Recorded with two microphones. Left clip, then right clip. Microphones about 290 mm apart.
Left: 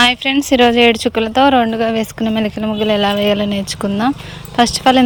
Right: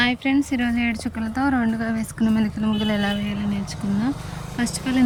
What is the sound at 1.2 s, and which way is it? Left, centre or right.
Speech, left.